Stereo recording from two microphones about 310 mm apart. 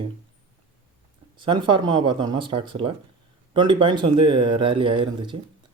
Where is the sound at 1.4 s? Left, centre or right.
Centre.